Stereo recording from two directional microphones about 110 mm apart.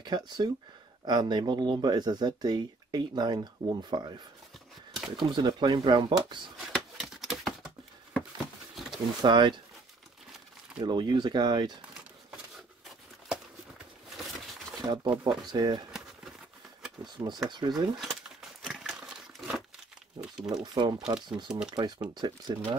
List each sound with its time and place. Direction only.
0.0 s speech: 40° right (ahead or behind)
4.9 s shuffling cards: 5° right (ahead or behind)
5.3 s speech: 40° right (ahead or behind)
6.7 s a sound: centre (ahead or behind)
9.2 s speech: 45° right (ahead or behind)
10.8 s speech: 45° right (ahead or behind)
14.8 s speech: 35° right (ahead or behind)
17.0 s speech: 40° right (ahead or behind)
18.0 s a sound: 5° right (ahead or behind)
20.5 s speech: 45° right (ahead or behind)